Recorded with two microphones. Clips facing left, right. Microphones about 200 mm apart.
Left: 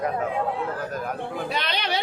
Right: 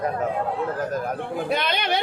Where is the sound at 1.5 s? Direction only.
50° right (ahead or behind).